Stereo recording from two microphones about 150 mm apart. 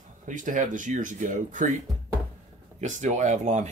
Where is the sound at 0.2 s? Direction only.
60° right (ahead or behind).